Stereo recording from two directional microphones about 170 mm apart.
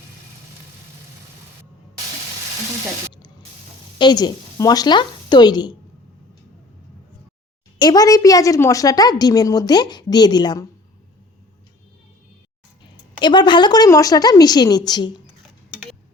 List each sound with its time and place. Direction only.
3.9 s a woman's voice: 25° left (ahead or behind)
7.8 s a woman's voice: 25° left (ahead or behind)
13.1 s a woman's voice: 25° left (ahead or behind)